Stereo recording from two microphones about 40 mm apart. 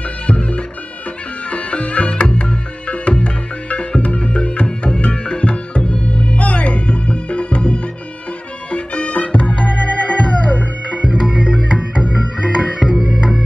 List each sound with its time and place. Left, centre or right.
0.3 s music: left
11.0 s music: right
12.8 s music: centre